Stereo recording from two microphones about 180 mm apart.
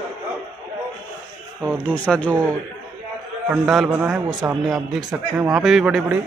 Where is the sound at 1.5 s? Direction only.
10° right (ahead or behind).